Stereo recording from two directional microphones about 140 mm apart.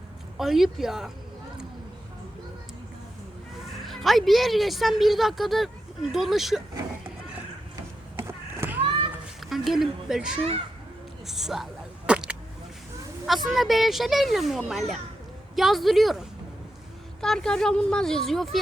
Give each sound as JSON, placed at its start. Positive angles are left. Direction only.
{"t": 0.3, "sound": "a woman's voice", "side_deg": 0}
{"t": 3.8, "sound": "a woman's voice", "side_deg": 0}
{"t": 8.3, "sound": "a sound", "side_deg": -15}
{"t": 9.4, "sound": "speech", "side_deg": 0}
{"t": 11.3, "sound": "single-lens reflex camera", "side_deg": 0}
{"t": 13.2, "sound": "a woman's voice", "side_deg": 0}